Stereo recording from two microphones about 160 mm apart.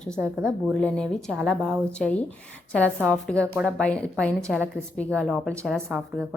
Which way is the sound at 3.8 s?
5° left (ahead or behind).